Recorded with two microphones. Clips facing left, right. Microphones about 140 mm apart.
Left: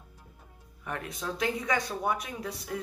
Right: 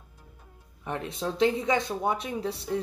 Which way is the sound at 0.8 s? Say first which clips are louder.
Right 4 dB; 25° right (ahead or behind).